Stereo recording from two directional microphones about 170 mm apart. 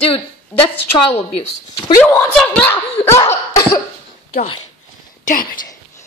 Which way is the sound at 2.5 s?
10° left (ahead or behind).